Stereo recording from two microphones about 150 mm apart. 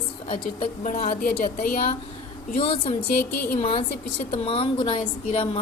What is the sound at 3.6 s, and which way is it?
A woman's voice, 45° left (ahead or behind).